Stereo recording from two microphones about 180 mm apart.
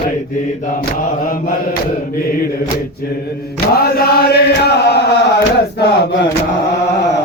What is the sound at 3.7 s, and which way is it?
Chant, 60° left (ahead or behind).